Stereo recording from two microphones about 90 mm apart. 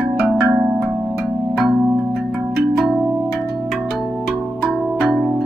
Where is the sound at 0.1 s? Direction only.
15° right (ahead or behind).